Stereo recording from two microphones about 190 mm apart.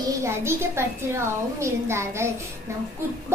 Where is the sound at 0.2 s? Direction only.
15° right (ahead or behind).